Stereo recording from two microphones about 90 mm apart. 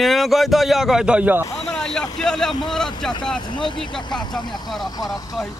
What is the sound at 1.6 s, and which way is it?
Vehicle, 10° left (ahead or behind).